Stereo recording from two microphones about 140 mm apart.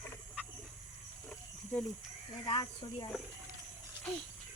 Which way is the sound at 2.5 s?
35° left (ahead or behind).